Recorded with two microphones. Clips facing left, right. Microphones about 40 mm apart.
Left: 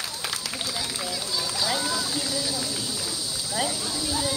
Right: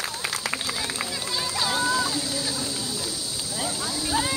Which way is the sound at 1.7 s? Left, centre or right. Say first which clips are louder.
Right 4 dB; right.